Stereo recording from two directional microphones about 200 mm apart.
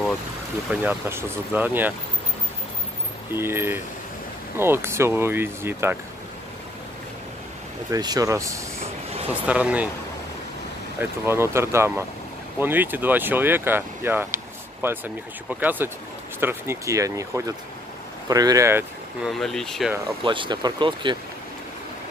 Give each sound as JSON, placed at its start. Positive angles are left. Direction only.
{"t": 0.7, "sound": "speech", "side_deg": -10}
{"t": 3.3, "sound": "speech", "side_deg": -10}
{"t": 7.9, "sound": "speech", "side_deg": -20}
{"t": 11.0, "sound": "speech", "side_deg": -10}
{"t": 19.3, "sound": "speech", "side_deg": 0}
{"t": 20.2, "sound": "speech", "side_deg": -25}